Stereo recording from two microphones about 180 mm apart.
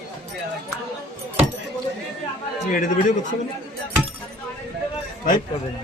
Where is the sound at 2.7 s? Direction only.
45° left (ahead or behind).